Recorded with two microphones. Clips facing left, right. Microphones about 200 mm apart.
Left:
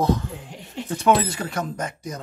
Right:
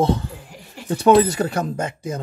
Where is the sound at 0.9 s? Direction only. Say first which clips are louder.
Right 6 dB; 35° right (ahead or behind).